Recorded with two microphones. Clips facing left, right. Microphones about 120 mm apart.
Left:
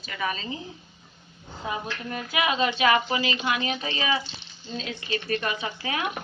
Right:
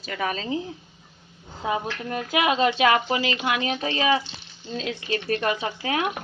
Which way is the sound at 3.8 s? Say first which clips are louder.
Right 5 dB; 60° right (ahead or behind).